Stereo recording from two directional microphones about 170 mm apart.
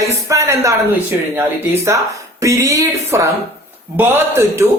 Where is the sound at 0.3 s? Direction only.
20° right (ahead or behind).